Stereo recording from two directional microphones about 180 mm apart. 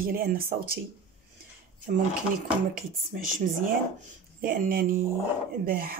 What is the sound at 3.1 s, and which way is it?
Speech, 50° right (ahead or behind).